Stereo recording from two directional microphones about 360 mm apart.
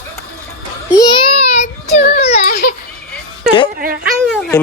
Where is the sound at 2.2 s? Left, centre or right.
Centre.